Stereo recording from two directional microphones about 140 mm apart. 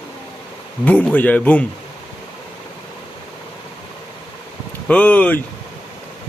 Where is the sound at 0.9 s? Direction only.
10° left (ahead or behind).